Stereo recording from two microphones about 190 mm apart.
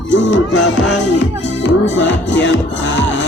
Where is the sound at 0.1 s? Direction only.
70° left (ahead or behind).